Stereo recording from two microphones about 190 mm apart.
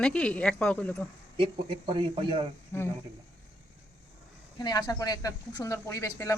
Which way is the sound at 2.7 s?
10° left (ahead or behind).